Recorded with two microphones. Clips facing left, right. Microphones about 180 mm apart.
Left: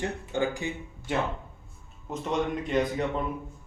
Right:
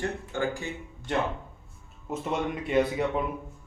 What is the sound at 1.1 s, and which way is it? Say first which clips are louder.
Speech: right 1 dB; 5° left (ahead or behind).